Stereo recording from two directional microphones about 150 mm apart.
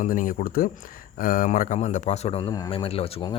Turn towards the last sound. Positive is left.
turn(degrees=35)  # may be behind; listen again after turning